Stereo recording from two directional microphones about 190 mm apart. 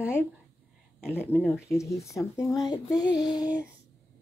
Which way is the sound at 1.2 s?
10° left (ahead or behind).